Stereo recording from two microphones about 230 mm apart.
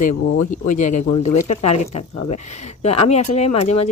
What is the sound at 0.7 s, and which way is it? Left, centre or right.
Speech, left.